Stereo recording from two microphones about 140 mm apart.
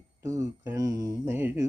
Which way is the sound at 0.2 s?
20° right (ahead or behind).